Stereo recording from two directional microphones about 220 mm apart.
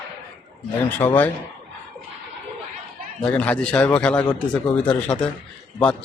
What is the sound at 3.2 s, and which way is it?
Speech, 5° left (ahead or behind).